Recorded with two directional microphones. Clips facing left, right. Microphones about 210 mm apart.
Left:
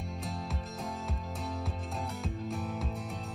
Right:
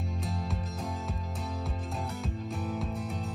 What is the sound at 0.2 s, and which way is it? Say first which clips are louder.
Music: right 3 dB; centre (ahead or behind).